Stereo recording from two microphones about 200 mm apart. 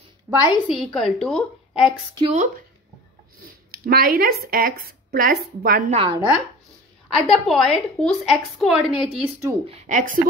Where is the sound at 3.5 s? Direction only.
50° right (ahead or behind).